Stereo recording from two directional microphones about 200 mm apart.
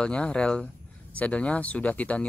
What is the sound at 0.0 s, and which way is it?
Speech, 5° left (ahead or behind).